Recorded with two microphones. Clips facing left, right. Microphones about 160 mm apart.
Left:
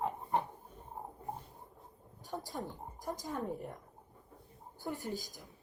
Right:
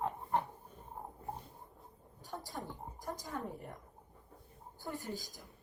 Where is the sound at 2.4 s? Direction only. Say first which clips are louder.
Left 2 dB; 20° left (ahead or behind).